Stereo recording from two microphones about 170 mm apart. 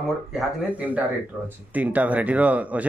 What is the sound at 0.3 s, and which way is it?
Speech, 5° right (ahead or behind).